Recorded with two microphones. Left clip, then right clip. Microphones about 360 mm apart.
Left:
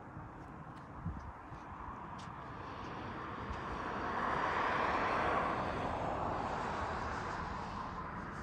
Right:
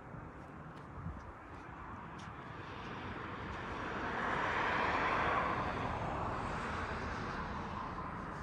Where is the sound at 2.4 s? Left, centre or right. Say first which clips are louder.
Left 1 dB; left.